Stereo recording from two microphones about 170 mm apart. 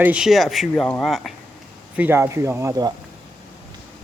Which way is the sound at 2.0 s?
10° right (ahead or behind).